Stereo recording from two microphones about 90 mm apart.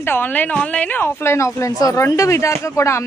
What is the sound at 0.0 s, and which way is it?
A woman's voice, 25° left (ahead or behind).